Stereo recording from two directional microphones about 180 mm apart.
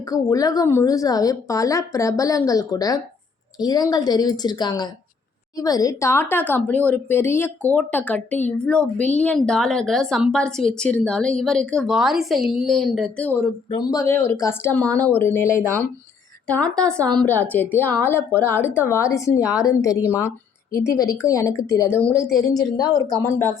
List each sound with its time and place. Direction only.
0.1 s a woman's voice: 20° left (ahead or behind); by 13.2 s centre (ahead or behind)
13.7 s a woman's voice: 20° left (ahead or behind)
22.1 s speech: 5° right (ahead or behind)
22.4 s a woman's voice: 20° left (ahead or behind)